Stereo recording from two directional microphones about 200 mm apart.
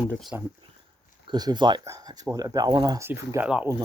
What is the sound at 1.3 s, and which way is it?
Speech, 20° right (ahead or behind).